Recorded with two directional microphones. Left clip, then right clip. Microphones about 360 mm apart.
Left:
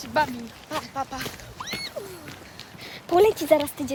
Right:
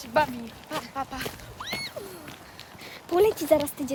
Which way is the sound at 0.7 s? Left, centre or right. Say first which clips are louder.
Left 2 dB; centre.